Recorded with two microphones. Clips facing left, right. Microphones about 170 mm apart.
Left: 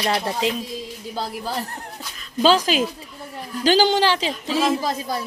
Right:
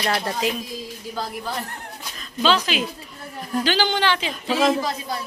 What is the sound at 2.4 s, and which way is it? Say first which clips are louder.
A man's voice: left 4 dB; 40° left (ahead or behind).